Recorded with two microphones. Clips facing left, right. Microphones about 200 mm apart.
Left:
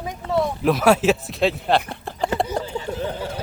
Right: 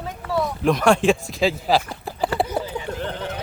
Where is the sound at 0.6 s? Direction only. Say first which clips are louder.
Even; 5° left (ahead or behind).